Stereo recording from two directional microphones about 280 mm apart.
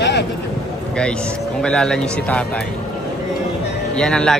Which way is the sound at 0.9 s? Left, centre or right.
Centre.